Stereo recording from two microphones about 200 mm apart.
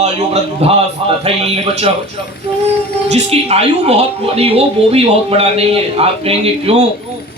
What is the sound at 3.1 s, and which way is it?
A woman's voice, 35° right (ahead or behind).